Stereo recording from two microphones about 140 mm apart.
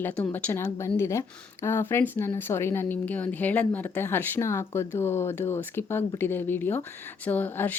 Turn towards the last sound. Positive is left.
turn(degrees=15)  # may be behind; listen again after turning